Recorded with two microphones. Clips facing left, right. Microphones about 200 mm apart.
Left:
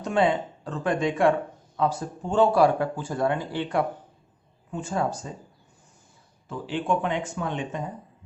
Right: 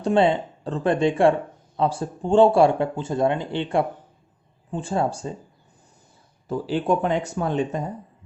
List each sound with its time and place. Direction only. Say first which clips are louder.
0.0 s speech: right 4 dB; 30° right (ahead or behind)
6.5 s speech: right 4 dB; 40° right (ahead or behind)